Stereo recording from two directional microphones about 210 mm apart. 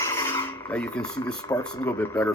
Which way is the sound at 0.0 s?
10° left (ahead or behind).